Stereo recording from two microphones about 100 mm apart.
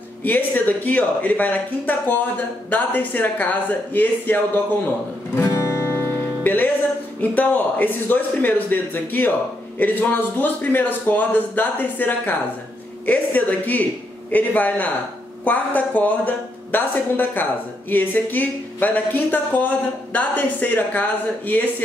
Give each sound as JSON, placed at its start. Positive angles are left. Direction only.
{"t": 0.2, "sound": "a woman's voice", "side_deg": 20}
{"t": 5.3, "sound": "music", "side_deg": 25}
{"t": 7.2, "sound": "a woman's voice", "side_deg": 15}